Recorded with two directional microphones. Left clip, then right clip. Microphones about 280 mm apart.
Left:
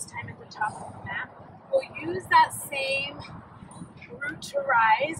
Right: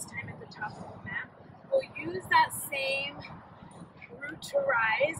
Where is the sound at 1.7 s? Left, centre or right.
Centre.